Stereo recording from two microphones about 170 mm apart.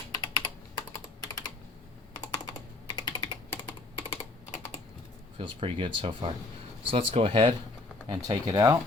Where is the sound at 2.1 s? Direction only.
25° left (ahead or behind).